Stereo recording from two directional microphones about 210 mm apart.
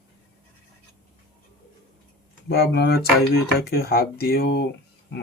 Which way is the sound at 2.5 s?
50° left (ahead or behind).